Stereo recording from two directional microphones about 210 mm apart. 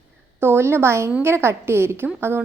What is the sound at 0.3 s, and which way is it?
A woman's voice, 10° right (ahead or behind).